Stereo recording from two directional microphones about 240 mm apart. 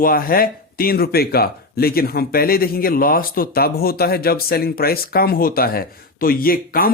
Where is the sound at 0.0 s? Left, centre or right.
Left.